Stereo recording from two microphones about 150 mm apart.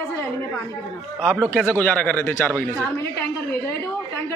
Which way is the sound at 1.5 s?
10° left (ahead or behind).